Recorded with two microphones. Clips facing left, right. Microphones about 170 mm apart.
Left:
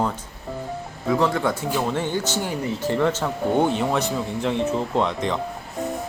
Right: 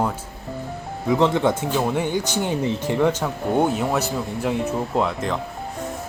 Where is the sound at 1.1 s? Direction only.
20° right (ahead or behind).